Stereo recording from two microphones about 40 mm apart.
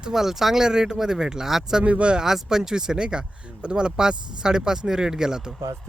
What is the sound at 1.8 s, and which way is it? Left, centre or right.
Speech, right.